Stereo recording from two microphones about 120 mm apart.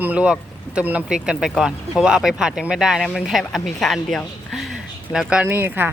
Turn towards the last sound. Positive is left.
turn(degrees=-20)  # may be behind; listen again after turning